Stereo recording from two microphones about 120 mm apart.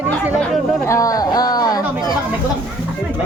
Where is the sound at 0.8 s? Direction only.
25° left (ahead or behind).